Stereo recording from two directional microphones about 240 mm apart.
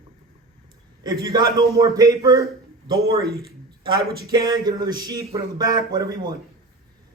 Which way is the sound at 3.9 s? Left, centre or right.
Centre.